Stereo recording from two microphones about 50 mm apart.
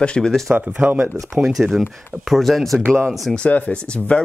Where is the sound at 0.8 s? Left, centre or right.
Right.